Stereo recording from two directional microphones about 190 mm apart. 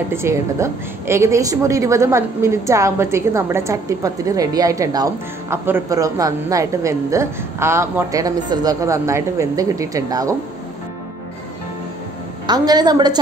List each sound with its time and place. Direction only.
0.1 s a woman's voice: 15° right (ahead or behind)
12.4 s a woman's voice: 20° right (ahead or behind)